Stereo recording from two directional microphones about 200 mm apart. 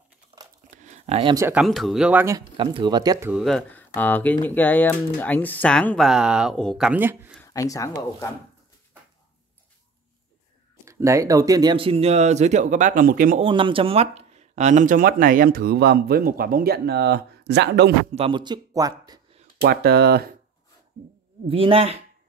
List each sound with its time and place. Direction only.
0.7 s a sound: 35° right (ahead or behind)
1.3 s speech: 15° right (ahead or behind)
1.6 s speech: centre (ahead or behind)
2.5 s speech: 25° right (ahead or behind)
3.3 s speech: centre (ahead or behind)
6.9 s speech: 10° right (ahead or behind)
7.3 s speech: 15° left (ahead or behind)
10.9 s speech: 15° right (ahead or behind); by 13.4 s 45° right (ahead or behind)
13.4 s speech: 25° right (ahead or behind); by 17.9 s 55° right (ahead or behind)
18.1 s speech: 25° right (ahead or behind)
19.6 s speech: 50° right (ahead or behind)
21.5 s speech: 30° right (ahead or behind)